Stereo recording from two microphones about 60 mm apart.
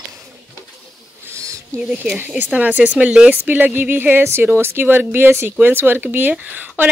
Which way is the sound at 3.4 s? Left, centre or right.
Right.